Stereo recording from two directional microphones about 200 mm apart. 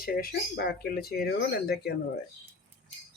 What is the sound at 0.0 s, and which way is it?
Speech, 50° left (ahead or behind).